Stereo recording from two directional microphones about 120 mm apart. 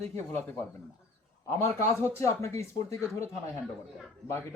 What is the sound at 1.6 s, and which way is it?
Speech, 20° left (ahead or behind).